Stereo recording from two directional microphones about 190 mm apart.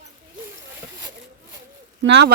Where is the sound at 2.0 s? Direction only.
65° right (ahead or behind).